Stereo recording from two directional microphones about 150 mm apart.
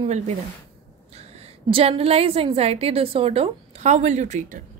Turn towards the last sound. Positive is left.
turn(degrees=-55)  # may be behind; listen again after turning